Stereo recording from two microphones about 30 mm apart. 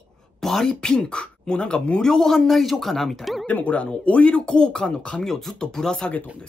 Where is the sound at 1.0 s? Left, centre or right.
Left.